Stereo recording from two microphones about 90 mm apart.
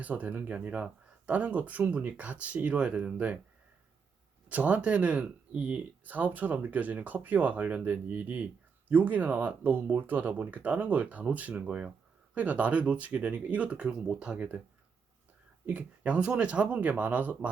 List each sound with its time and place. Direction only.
0.0 s speech: 15° right (ahead or behind)
4.4 s speech: 15° right (ahead or behind)
15.6 s speech: 15° right (ahead or behind)